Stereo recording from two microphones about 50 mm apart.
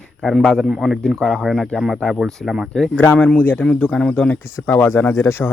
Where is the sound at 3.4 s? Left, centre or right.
Left.